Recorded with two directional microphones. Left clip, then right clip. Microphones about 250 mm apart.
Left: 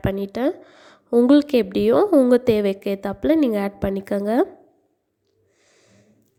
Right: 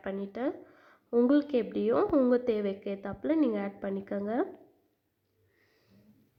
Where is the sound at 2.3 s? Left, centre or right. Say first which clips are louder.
Left 11 dB; left.